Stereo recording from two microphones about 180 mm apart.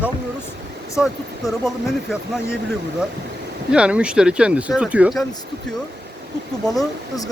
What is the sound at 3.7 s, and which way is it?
Speech, 5° right (ahead or behind).